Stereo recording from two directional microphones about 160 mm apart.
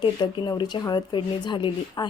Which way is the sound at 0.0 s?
25° left (ahead or behind).